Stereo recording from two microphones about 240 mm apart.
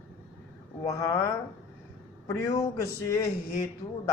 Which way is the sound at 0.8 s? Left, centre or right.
Centre.